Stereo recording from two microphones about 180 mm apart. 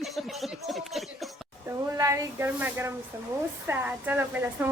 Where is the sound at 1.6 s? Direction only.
15° right (ahead or behind).